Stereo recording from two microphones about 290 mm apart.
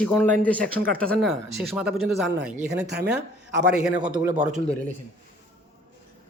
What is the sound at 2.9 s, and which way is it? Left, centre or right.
Speech, right.